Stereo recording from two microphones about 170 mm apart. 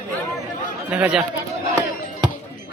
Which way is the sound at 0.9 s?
5° right (ahead or behind).